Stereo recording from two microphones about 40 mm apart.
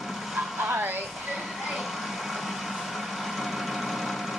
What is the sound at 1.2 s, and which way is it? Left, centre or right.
Vehicle, centre.